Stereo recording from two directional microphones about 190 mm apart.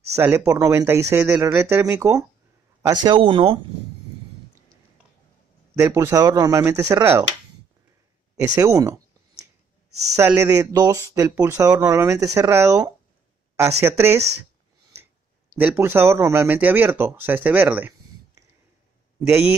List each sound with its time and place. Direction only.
0.1 s a man's voice: 10° right (ahead or behind); by 3.5 s 30° right (ahead or behind)
5.8 s speech: 15° right (ahead or behind)
8.5 s a sound: 15° right (ahead or behind)
10.1 s speech: 15° right (ahead or behind)
15.5 s a man's voice: 10° right (ahead or behind)